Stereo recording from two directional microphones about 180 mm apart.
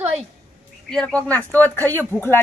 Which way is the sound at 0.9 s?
5° left (ahead or behind).